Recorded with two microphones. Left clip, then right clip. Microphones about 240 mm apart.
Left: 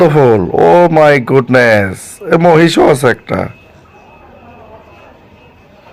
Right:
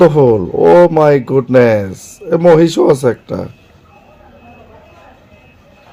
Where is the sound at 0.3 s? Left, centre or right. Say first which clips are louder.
Even; centre.